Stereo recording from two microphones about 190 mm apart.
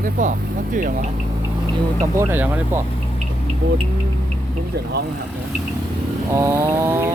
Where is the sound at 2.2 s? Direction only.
10° right (ahead or behind).